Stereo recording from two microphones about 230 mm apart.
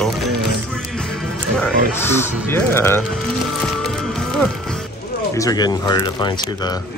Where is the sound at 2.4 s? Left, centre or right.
Centre.